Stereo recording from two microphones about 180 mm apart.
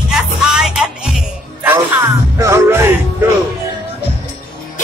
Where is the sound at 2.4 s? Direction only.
15° right (ahead or behind).